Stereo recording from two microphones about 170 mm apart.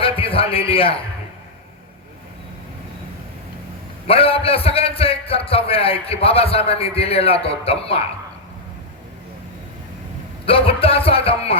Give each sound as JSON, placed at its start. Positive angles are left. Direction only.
{"t": 0.0, "sound": "a man's voice", "side_deg": 35}
{"t": 4.0, "sound": "a man's voice", "side_deg": 35}
{"t": 10.4, "sound": "a man's voice", "side_deg": 35}